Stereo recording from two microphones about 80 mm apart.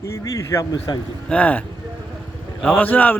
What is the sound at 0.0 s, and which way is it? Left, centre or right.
Speech, left.